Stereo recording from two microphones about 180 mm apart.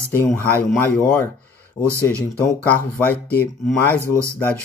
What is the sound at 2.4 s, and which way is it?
Speech, 10° left (ahead or behind).